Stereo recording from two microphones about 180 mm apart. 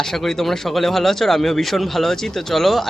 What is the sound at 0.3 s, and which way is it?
Speech, centre (ahead or behind).